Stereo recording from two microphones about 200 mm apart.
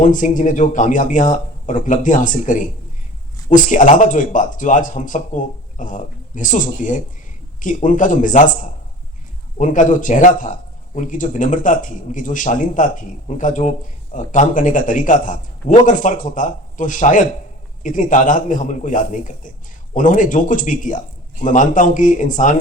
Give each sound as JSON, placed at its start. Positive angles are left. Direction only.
{"t": 0.0, "sound": "a man's voice", "side_deg": 40}